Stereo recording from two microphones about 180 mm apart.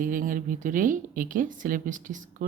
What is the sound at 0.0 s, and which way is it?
Speech, 50° right (ahead or behind).